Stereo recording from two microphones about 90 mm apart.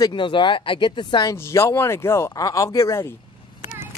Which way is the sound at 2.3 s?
40° left (ahead or behind).